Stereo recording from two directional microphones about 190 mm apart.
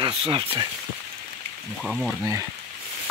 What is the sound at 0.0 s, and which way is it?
Speech, 30° right (ahead or behind).